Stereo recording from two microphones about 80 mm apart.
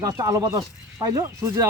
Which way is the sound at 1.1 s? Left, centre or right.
Right.